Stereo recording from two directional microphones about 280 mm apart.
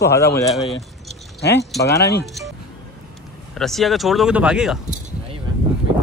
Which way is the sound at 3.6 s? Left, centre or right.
Centre.